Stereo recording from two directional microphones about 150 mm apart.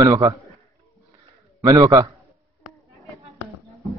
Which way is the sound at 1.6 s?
25° right (ahead or behind).